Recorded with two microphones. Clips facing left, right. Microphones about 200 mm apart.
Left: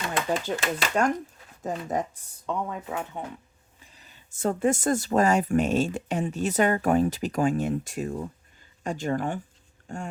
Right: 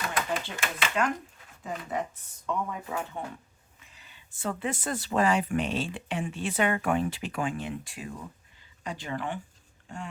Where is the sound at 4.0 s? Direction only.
40° left (ahead or behind).